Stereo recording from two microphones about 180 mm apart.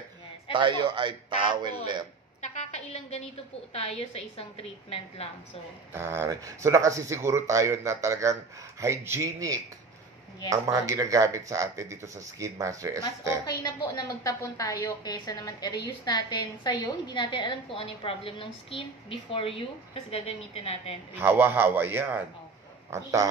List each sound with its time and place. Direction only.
0.5 s speech: 25° right (ahead or behind)
2.4 s a sound: 35° left (ahead or behind)
3.7 s a woman's voice: 35° left (ahead or behind)
5.9 s speech: 15° right (ahead or behind)
13.9 s a woman's voice: 20° left (ahead or behind)
21.2 s speech: 10° right (ahead or behind)